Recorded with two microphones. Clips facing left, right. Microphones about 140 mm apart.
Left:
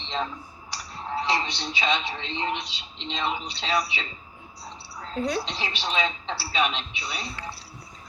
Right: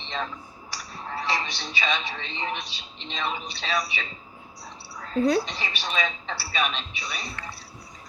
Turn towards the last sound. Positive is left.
turn(degrees=15)  # may be behind; listen again after turning